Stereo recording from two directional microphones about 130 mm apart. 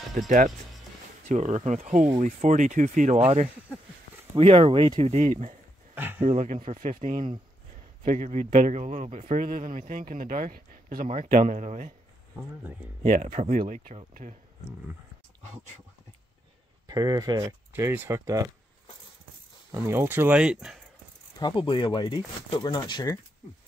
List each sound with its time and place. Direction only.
1.3 s speech: 65° right (ahead or behind)
2.1 s speech: 55° right (ahead or behind); by 3.2 s 75° right (ahead or behind)
4.4 s speech: 45° right (ahead or behind)
4.9 s speech: 60° right (ahead or behind)
5.9 s a sound: 15° right (ahead or behind)
6.2 s speech: 60° right (ahead or behind)
13.0 s speech: 80° right
16.8 s speech: 30° right (ahead or behind)
19.7 s speech: 20° right (ahead or behind)
21.4 s speech: 35° left (ahead or behind)